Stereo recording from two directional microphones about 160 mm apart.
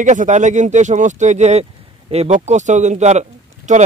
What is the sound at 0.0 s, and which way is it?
Speech, 50° right (ahead or behind).